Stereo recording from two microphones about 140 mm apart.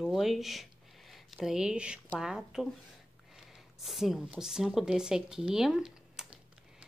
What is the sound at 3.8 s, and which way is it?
Speech, centre (ahead or behind).